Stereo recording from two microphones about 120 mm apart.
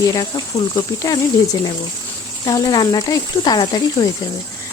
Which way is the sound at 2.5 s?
30° left (ahead or behind).